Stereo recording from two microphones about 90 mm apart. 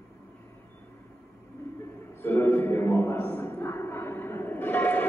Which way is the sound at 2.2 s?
25° left (ahead or behind).